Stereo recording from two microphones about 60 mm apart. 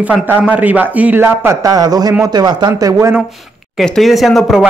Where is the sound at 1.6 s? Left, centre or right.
Right.